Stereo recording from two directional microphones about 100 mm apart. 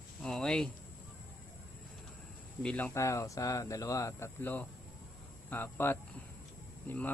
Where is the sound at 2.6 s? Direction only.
15° left (ahead or behind).